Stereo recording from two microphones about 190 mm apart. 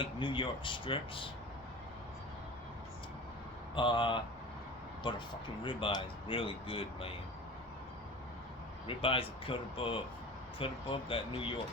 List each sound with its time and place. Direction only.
0.0 s speech: 25° left (ahead or behind)
3.8 s speech: 25° left (ahead or behind)
8.9 s speech: 30° left (ahead or behind)